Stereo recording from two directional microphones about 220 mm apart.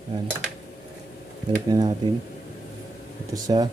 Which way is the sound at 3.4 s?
15° right (ahead or behind).